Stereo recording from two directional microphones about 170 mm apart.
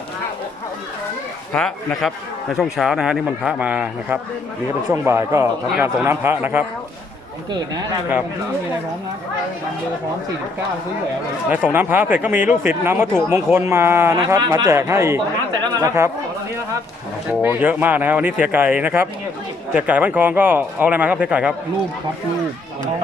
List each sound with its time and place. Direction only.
1.5 s a man's voice: 5° left (ahead or behind)
11.4 s speech: 10° right (ahead or behind)
15.6 s chatter: 20° right (ahead or behind)
17.4 s speech: 10° right (ahead or behind)